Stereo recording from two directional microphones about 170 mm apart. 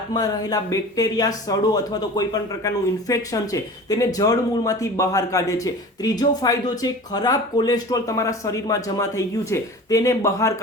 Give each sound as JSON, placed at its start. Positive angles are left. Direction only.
{"t": 0.1, "sound": "speech", "side_deg": 20}